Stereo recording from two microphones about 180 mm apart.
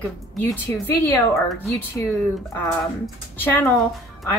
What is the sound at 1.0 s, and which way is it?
Speech, 15° left (ahead or behind).